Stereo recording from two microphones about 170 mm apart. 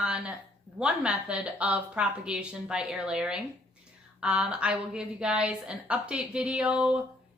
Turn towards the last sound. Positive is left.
turn(degrees=-5)  # may be behind; listen again after turning